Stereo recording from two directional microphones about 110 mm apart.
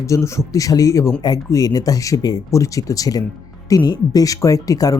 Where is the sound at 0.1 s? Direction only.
25° left (ahead or behind).